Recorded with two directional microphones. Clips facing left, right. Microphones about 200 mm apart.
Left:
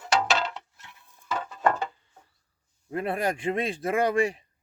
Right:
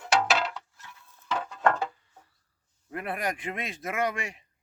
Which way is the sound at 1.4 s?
5° left (ahead or behind).